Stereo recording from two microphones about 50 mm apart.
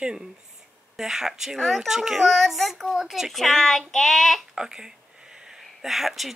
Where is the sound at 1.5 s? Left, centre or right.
Centre.